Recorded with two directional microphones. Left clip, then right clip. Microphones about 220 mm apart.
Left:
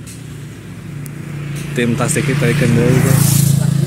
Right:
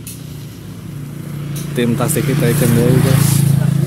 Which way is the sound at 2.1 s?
45° right (ahead or behind).